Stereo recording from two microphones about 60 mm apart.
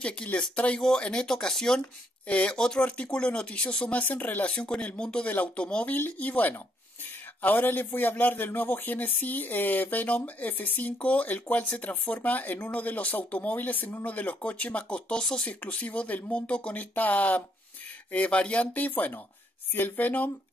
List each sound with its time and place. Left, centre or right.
0.0 s speech: centre
2.2 s speech: left
5.9 s a man's voice: left